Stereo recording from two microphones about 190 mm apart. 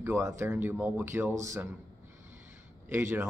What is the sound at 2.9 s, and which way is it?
Speech, 10° right (ahead or behind).